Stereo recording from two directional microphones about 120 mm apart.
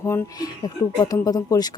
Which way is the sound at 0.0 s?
30° left (ahead or behind).